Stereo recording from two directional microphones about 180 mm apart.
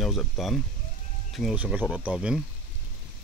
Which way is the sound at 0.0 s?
Centre (ahead or behind).